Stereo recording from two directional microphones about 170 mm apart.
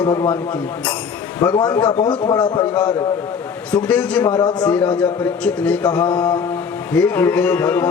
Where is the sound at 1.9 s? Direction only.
30° left (ahead or behind).